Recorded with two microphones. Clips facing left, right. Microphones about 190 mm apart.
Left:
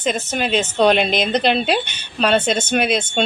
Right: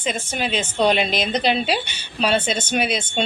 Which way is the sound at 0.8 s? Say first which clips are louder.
Left 3 dB; 60° left (ahead or behind).